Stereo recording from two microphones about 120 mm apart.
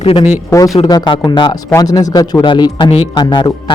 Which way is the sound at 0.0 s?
55° left (ahead or behind).